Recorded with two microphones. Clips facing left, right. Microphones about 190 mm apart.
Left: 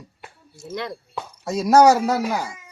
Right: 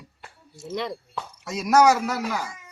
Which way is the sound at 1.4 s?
30° left (ahead or behind).